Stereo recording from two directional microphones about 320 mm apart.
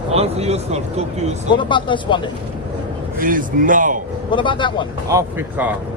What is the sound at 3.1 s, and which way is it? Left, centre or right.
Speech, right.